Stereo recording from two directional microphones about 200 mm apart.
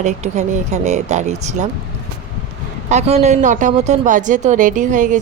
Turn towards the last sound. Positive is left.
turn(degrees=-40)  # may be behind; listen again after turning